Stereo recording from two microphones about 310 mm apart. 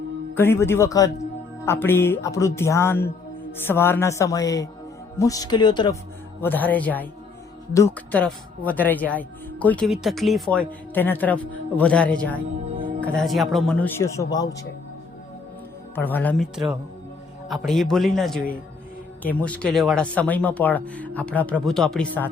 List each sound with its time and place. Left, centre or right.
0.3 s speech: centre
12.6 s music: right
13.0 s speech: centre
16.0 s speech: centre
17.5 s speech: centre